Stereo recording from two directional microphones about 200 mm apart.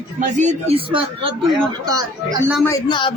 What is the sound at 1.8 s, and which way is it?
Speech, 20° right (ahead or behind).